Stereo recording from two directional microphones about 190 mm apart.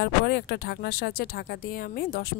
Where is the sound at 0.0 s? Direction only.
60° left (ahead or behind).